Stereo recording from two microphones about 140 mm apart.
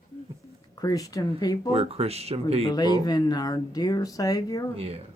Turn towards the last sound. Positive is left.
turn(degrees=25)  # may be behind; listen again after turning